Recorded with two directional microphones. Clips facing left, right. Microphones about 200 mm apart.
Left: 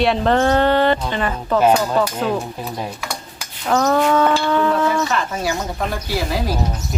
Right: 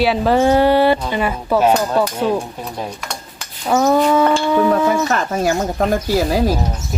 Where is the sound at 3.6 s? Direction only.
10° right (ahead or behind).